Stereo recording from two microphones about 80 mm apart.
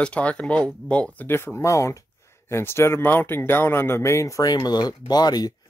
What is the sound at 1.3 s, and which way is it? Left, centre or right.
Speech, left.